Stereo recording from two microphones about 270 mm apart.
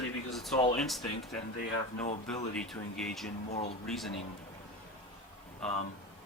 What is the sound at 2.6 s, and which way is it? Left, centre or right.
Speech, centre.